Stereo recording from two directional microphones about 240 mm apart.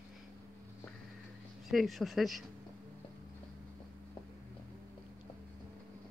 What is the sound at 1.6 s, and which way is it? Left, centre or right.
Speech, centre.